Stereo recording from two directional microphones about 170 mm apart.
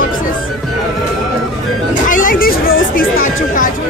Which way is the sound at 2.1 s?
50° left (ahead or behind).